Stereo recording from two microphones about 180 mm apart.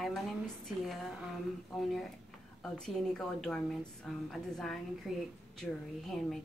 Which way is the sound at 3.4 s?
5° left (ahead or behind).